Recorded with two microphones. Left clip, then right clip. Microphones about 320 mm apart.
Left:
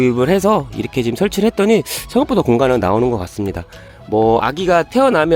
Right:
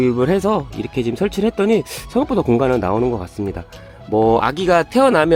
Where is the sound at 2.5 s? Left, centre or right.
Left.